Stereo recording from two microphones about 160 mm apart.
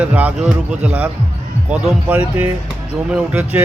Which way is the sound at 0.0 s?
10° right (ahead or behind).